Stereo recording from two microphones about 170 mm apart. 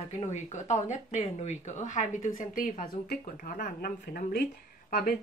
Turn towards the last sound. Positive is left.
turn(degrees=60)  # may be behind; listen again after turning